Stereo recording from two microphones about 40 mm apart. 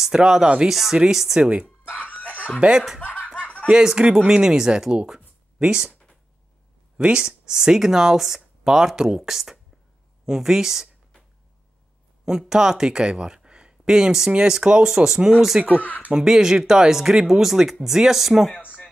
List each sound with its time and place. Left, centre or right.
0.0 s speech: centre
0.7 s speech: centre
1.4 s speech: centre
1.9 s a sound: left
2.6 s speech: right
3.0 s snicker: left
3.7 s speech: centre
7.0 s speech: right
12.3 s speech: centre
15.5 s speech: right
16.1 s speech: centre